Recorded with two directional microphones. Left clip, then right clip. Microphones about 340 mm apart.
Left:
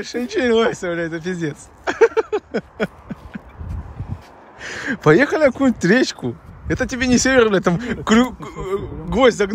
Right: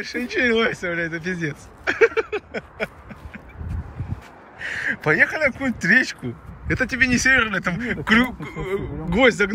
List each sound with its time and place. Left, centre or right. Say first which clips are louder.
0.0 s speech: left 1 dB; centre
4.6 s speech: right 1 dB; centre